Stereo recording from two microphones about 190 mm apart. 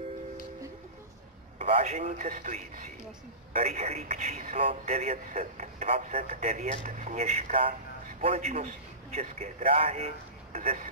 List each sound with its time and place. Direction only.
1.6 s a man's voice: 30° right (ahead or behind)